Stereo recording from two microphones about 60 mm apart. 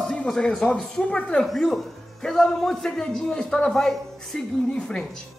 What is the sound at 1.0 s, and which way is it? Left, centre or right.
Speech, left.